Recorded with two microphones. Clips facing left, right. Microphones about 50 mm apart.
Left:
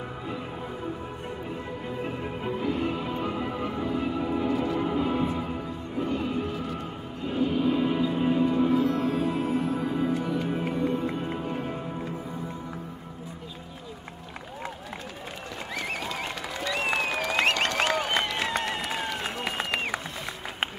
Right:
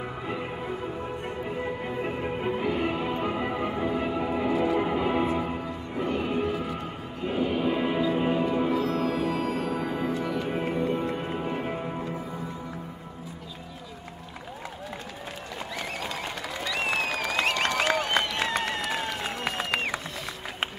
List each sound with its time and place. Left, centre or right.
0.0 s music: right
6.4 s music: centre
8.9 s music: right
9.7 s music: centre
10.2 s music: centre
10.7 s music: centre
16.7 s applause: centre
17.8 s applause: centre